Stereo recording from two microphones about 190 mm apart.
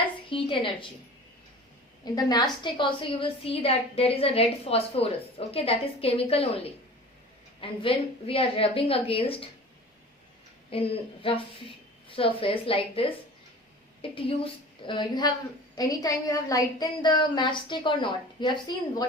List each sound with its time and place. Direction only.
0.3 s a woman's voice: 25° left (ahead or behind)
2.1 s a woman's voice: 20° left (ahead or behind)
10.7 s a woman's voice: 30° left (ahead or behind)